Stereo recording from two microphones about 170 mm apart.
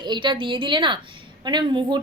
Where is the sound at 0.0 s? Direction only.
25° right (ahead or behind).